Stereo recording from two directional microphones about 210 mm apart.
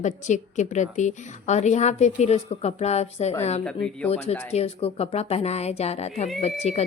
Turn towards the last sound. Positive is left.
turn(degrees=30)  # may be behind; listen again after turning